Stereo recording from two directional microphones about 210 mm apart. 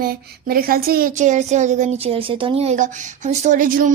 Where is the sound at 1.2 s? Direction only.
35° right (ahead or behind).